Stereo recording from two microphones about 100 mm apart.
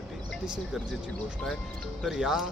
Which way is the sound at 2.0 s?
5° right (ahead or behind).